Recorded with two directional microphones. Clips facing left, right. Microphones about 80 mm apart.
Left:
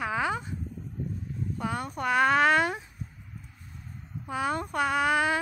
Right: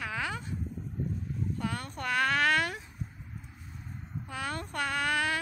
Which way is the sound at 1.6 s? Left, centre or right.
Centre.